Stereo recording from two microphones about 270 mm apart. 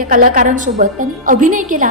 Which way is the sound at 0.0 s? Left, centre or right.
Right.